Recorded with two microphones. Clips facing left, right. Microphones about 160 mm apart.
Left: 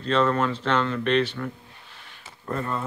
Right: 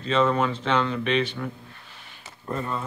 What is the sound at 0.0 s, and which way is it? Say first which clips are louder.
Speech: even; 5° right (ahead or behind).